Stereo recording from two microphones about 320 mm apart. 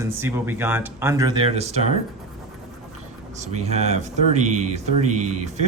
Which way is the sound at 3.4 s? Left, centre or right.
Right.